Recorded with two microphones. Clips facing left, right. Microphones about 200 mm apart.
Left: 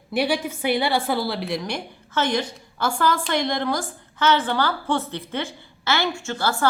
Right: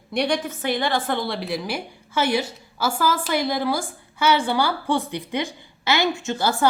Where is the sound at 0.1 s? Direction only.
5° left (ahead or behind).